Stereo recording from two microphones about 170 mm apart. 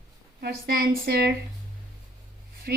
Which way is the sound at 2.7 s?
70° right (ahead or behind).